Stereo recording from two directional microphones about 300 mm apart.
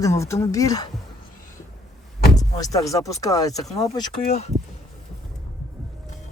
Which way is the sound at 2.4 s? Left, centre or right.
Centre.